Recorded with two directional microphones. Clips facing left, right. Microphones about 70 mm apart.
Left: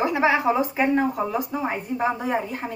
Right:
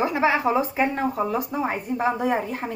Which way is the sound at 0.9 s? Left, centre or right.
Centre.